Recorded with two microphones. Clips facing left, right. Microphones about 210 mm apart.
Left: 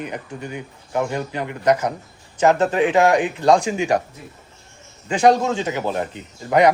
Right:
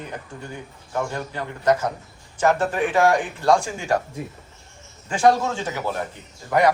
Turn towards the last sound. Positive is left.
turn(degrees=20)  # may be behind; listen again after turning